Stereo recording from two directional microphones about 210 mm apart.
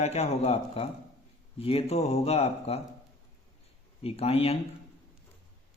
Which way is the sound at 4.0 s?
30° left (ahead or behind).